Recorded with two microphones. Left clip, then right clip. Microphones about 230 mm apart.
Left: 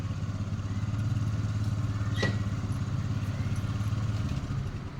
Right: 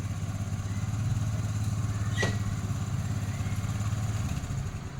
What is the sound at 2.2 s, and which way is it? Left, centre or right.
Vehicle, right.